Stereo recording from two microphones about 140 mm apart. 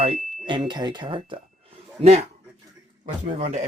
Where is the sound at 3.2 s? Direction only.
55° right (ahead or behind).